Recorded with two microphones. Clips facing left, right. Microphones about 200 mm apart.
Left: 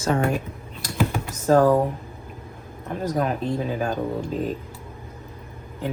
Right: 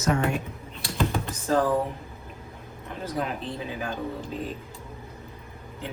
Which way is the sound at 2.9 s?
45° left (ahead or behind).